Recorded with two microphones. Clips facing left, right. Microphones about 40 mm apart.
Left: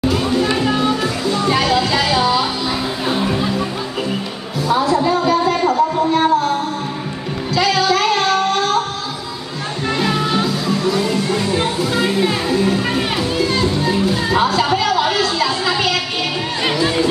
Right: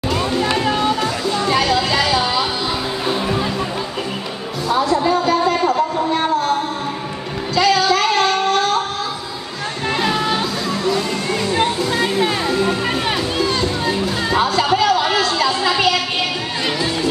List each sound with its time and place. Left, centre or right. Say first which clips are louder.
0.1 s music: left 1 dB; centre
4.6 s music: left 1 dB; centre
7.5 s music: right 1 dB; centre
9.8 s music: even; centre